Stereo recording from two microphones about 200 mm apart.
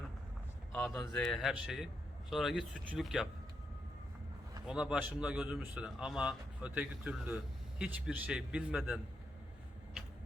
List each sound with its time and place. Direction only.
0.7 s a man's voice: 5° left (ahead or behind)
4.6 s a man's voice: 5° right (ahead or behind)